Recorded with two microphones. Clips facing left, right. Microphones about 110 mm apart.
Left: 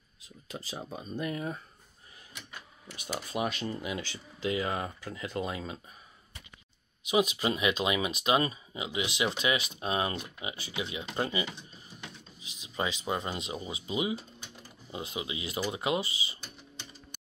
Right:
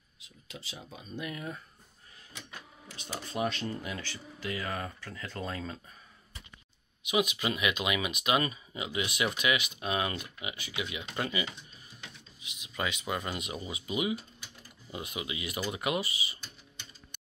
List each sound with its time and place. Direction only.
0.2 s speech: 40° left (ahead or behind)
3.0 s speech: 10° left (ahead or behind)
7.0 s speech: 35° left (ahead or behind)